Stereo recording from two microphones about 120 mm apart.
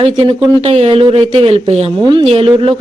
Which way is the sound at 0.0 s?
45° right (ahead or behind).